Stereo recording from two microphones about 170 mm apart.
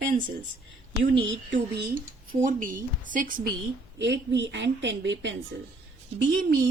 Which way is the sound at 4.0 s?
90° right.